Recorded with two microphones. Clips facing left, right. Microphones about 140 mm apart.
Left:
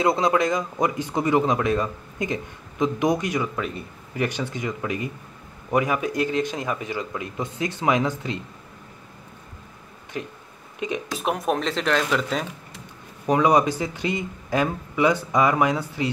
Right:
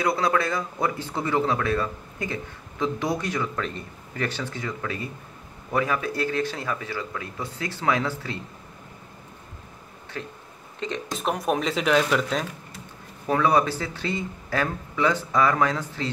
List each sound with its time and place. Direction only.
0.0 s speech: 20° left (ahead or behind)
10.1 s speech: 15° left (ahead or behind); by 12.4 s centre (ahead or behind)
13.3 s speech: 15° left (ahead or behind)